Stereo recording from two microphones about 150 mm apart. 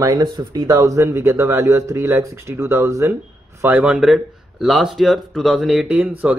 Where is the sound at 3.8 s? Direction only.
5° right (ahead or behind).